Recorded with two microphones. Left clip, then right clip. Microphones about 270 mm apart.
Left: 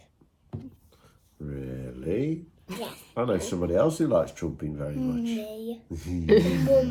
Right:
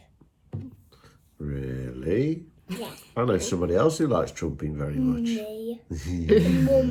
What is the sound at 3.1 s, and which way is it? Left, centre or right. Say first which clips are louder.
Speech: right 2 dB; right.